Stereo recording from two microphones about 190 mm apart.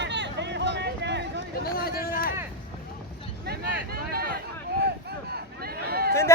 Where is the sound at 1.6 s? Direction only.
50° left (ahead or behind).